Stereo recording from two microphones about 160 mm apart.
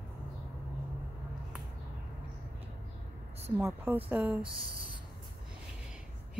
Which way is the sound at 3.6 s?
10° right (ahead or behind).